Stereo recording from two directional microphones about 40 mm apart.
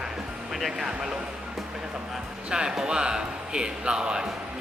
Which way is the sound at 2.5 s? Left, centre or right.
Centre.